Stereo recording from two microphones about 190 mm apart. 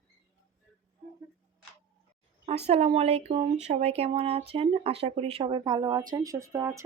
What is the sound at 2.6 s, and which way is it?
Speech, 35° right (ahead or behind).